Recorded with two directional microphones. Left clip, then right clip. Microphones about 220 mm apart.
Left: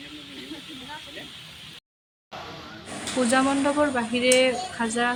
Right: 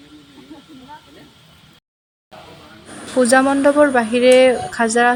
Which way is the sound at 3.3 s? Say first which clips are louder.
Right 9 dB; 30° right (ahead or behind).